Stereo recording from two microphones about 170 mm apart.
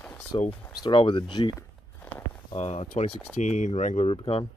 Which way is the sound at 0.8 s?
30° left (ahead or behind).